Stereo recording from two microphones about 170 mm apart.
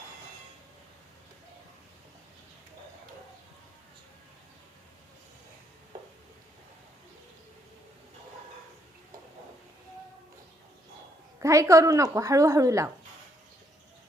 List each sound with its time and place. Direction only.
11.3 s a woman's voice: 15° right (ahead or behind)